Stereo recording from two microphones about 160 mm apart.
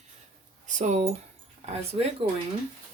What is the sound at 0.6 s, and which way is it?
Speech, 50° right (ahead or behind).